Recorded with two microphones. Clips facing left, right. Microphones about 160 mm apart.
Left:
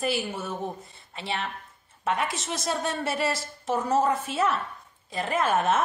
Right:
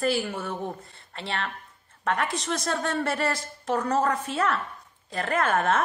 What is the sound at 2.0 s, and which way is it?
A woman's voice, 20° left (ahead or behind).